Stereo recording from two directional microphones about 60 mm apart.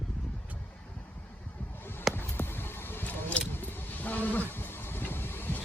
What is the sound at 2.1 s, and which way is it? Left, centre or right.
Vehicle, left.